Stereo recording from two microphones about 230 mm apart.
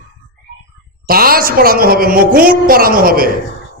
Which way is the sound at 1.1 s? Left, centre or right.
Right.